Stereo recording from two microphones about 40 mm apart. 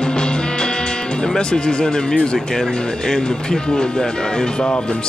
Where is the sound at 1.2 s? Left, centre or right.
Centre.